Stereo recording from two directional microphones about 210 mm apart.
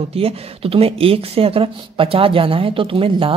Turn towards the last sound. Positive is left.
turn(degrees=-25)  # may be behind; listen again after turning